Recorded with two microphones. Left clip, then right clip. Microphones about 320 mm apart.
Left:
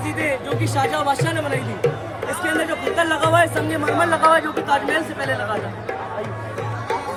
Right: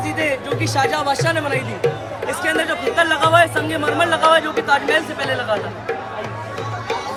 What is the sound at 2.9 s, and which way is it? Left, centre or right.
Speech, centre.